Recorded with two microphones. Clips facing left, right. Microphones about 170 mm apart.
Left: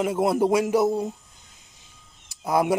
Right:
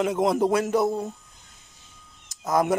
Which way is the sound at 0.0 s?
5° left (ahead or behind).